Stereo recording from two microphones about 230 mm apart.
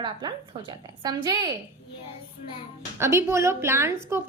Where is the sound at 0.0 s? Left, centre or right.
Centre.